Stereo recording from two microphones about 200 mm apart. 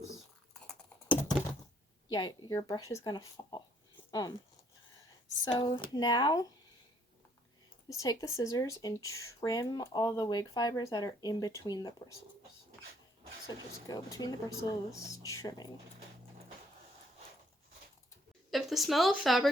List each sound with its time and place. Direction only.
0.7 s computer keyboard: 10° left (ahead or behind)
2.0 s speech: 20° left (ahead or behind)
5.5 s speech: 25° left (ahead or behind)
7.9 s speech: 15° left (ahead or behind)
13.8 s speech: 20° left (ahead or behind)
18.5 s speech: centre (ahead or behind)